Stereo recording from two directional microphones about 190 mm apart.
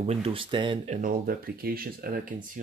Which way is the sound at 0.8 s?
50° right (ahead or behind).